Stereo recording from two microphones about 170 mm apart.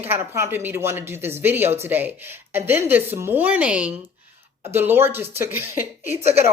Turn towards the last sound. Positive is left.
turn(degrees=-15)  # may be behind; listen again after turning